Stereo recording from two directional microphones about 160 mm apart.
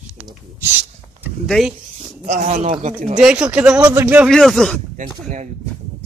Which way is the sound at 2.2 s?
50° right (ahead or behind).